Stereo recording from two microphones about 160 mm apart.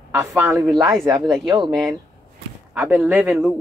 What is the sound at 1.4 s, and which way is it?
Speech, 30° right (ahead or behind).